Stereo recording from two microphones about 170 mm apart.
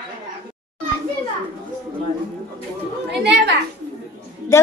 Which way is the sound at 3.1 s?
80° right.